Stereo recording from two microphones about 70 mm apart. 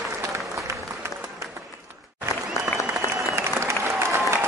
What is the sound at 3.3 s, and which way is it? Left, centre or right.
Applause, right.